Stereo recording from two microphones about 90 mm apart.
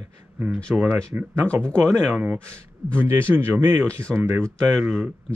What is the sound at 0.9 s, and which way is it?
Speech, 20° right (ahead or behind).